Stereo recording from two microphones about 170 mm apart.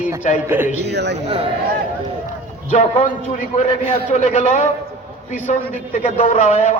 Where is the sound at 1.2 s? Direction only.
35° right (ahead or behind).